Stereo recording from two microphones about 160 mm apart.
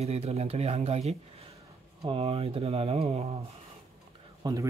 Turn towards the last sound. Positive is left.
turn(degrees=-20)  # may be behind; listen again after turning